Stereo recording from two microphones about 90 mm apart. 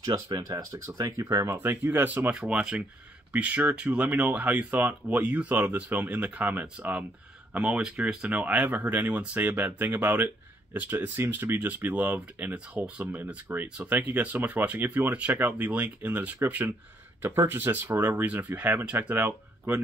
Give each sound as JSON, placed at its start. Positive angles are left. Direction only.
{"t": 0.0, "sound": "speech", "side_deg": -45}
{"t": 2.3, "sound": "speech", "side_deg": -10}